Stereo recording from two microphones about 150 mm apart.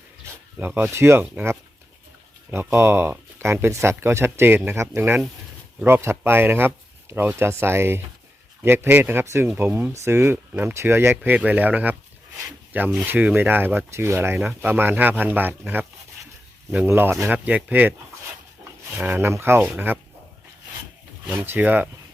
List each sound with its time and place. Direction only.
0.5 s speech: 15° right (ahead or behind)
18.9 s speech: 15° right (ahead or behind)
21.2 s speech: 15° right (ahead or behind)